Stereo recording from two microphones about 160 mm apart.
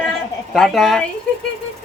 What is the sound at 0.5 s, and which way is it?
Speech, centre (ahead or behind).